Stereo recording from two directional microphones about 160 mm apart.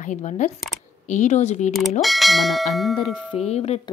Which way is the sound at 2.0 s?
Centre (ahead or behind).